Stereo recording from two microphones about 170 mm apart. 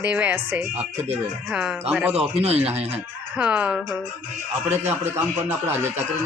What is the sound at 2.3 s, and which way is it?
Speech, 40° right (ahead or behind).